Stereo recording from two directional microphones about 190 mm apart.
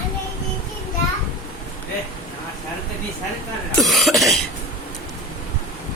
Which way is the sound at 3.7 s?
Centre (ahead or behind).